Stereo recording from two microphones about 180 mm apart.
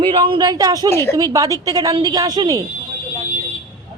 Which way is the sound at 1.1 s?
20° right (ahead or behind).